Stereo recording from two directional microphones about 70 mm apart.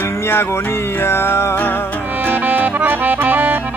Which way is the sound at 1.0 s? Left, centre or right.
Left.